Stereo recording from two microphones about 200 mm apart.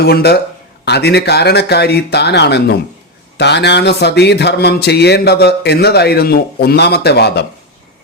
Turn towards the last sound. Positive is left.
turn(degrees=55)  # may be behind; listen again after turning